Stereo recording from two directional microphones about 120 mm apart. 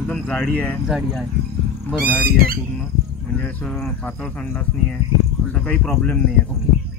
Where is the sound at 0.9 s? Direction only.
5° right (ahead or behind).